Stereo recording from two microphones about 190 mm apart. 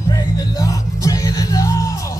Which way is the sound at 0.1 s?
20° left (ahead or behind).